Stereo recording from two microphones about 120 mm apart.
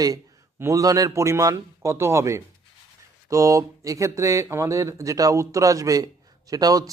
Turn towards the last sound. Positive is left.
turn(degrees=-30)  # may be behind; listen again after turning